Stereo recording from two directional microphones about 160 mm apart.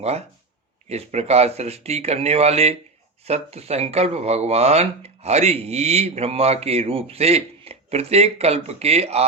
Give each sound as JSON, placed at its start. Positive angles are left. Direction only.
{"t": 0.9, "sound": "speech", "side_deg": -40}